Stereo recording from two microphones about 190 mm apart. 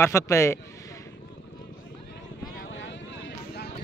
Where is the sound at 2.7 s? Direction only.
75° left (ahead or behind).